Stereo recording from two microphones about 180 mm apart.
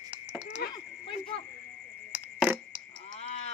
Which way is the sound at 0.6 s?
60° left (ahead or behind).